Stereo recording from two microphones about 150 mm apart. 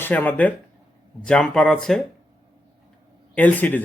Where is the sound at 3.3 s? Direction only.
10° left (ahead or behind).